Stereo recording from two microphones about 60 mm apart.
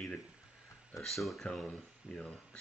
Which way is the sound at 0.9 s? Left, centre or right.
Centre.